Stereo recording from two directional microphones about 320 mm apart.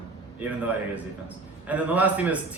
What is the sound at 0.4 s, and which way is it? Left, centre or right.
A man's voice, centre.